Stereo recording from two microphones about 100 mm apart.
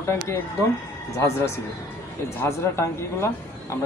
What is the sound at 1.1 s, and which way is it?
A man's voice, 30° left (ahead or behind).